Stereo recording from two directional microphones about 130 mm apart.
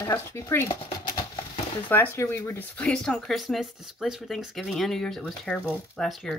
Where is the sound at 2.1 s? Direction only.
20° left (ahead or behind).